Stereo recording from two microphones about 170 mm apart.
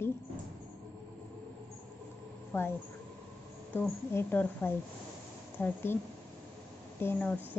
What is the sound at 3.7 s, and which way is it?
Speech, 10° left (ahead or behind).